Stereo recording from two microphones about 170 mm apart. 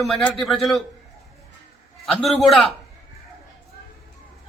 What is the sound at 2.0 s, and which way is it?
Speech, centre (ahead or behind).